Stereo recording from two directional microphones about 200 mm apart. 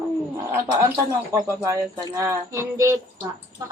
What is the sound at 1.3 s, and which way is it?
Speech, 15° right (ahead or behind).